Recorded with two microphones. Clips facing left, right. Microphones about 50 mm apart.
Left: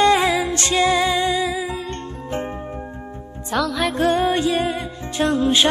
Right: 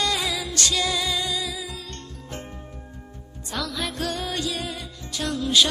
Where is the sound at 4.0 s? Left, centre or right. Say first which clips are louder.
Left 13 dB; left.